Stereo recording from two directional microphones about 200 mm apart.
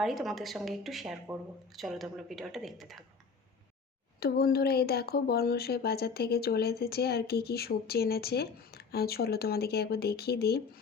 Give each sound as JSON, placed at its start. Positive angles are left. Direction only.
{"t": 0.0, "sound": "a woman's voice", "side_deg": 0}
{"t": 4.2, "sound": "speech", "side_deg": 50}